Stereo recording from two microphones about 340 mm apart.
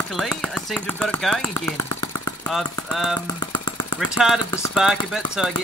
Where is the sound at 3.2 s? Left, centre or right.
Centre.